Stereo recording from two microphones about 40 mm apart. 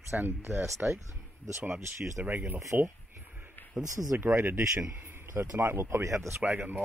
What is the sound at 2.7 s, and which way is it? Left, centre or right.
Speech, right.